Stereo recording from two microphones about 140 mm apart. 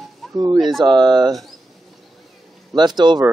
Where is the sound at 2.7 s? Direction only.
30° right (ahead or behind).